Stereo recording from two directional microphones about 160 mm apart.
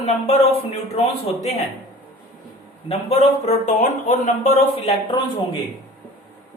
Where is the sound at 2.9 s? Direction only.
40° left (ahead or behind).